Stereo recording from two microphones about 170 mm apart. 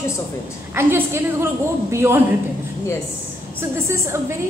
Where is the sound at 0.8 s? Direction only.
15° right (ahead or behind).